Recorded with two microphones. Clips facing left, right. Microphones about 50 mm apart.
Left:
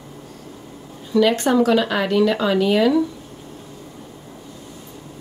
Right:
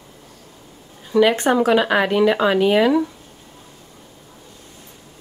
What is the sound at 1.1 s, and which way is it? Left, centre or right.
Speech, right.